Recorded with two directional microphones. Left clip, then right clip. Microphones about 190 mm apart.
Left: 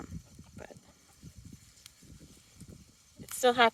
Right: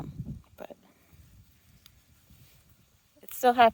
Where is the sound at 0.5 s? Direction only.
30° right (ahead or behind).